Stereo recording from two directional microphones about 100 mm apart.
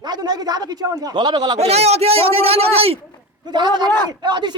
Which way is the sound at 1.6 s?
90° right.